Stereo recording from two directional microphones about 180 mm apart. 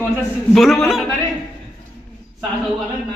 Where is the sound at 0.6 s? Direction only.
Centre (ahead or behind).